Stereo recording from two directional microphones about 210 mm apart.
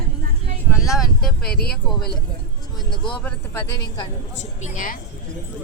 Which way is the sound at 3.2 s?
10° left (ahead or behind).